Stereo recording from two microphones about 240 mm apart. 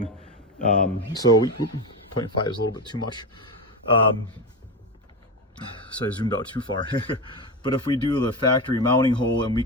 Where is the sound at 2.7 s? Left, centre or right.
Centre.